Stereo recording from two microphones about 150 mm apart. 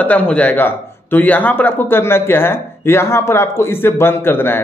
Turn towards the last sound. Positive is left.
turn(degrees=15)  # may be behind; listen again after turning